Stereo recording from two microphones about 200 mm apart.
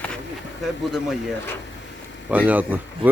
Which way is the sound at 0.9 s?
Centre (ahead or behind).